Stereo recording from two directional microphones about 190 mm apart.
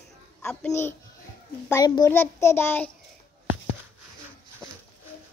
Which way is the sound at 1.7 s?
20° left (ahead or behind).